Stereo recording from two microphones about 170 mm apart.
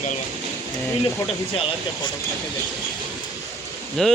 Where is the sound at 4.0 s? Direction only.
Centre (ahead or behind).